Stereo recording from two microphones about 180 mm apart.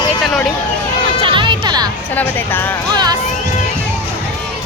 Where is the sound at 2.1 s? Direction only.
10° left (ahead or behind).